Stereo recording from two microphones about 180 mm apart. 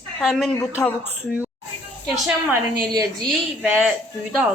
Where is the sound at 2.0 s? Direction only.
Centre (ahead or behind).